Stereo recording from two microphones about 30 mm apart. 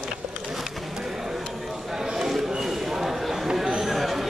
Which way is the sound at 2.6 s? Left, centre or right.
Centre.